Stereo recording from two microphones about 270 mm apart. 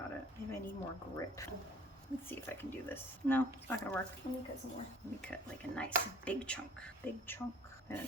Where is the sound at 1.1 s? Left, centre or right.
Centre.